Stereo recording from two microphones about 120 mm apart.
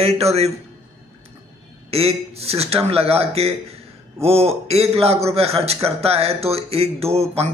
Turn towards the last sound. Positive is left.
turn(degrees=-55)  # may be behind; listen again after turning